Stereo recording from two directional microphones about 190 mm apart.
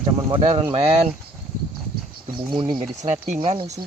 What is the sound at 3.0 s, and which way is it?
Speech, 40° right (ahead or behind).